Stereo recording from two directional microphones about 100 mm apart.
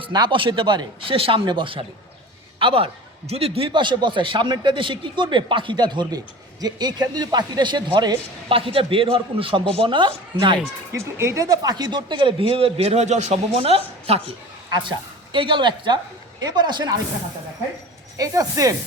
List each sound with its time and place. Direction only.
0.1 s speech: 50° right (ahead or behind)
1.1 s speech: 70° right (ahead or behind)
1.5 s a man's voice: 55° right (ahead or behind); by 3.7 s 80° right
3.7 s speech: 55° right (ahead or behind)
8.4 s speech: 65° right (ahead or behind)
10.9 s speech: 25° right (ahead or behind); by 14.2 s 80° right
14.8 s speech: 55° right (ahead or behind)
18.2 s speech: 35° right (ahead or behind)